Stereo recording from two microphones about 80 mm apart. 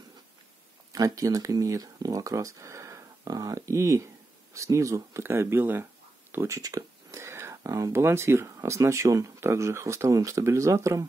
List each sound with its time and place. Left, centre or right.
0.9 s speech: right
6.3 s speech: right